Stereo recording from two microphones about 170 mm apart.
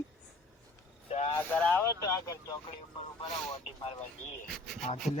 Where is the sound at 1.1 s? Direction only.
35° left (ahead or behind).